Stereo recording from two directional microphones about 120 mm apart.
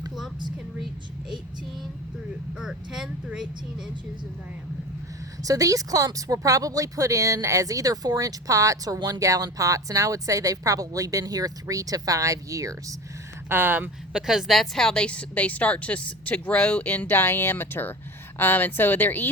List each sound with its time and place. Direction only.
2.6 s speech: 5° right (ahead or behind)
5.4 s speech: 30° right (ahead or behind)
13.5 s speech: 15° right (ahead or behind)
14.1 s a woman's voice: 5° right (ahead or behind); by 19.3 s 15° left (ahead or behind)